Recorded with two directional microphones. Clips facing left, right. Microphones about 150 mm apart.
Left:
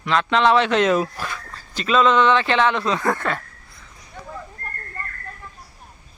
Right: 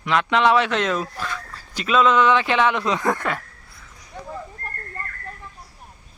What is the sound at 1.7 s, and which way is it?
Speech, 10° right (ahead or behind).